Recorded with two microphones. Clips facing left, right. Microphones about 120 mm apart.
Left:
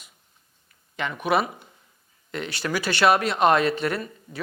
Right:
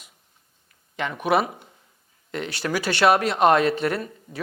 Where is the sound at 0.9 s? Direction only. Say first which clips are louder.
Right 1 dB; 45° right (ahead or behind).